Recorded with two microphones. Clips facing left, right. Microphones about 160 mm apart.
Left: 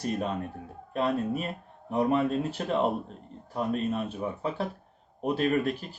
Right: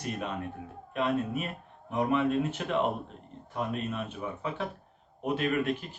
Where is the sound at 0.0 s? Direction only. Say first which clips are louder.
Left 4 dB; 35° left (ahead or behind).